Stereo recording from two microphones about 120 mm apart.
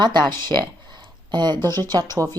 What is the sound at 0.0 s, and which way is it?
Speech, 40° right (ahead or behind).